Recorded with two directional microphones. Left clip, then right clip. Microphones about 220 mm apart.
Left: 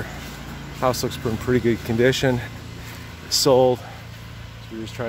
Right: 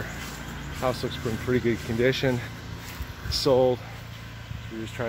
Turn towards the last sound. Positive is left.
turn(degrees=20)  # may be behind; listen again after turning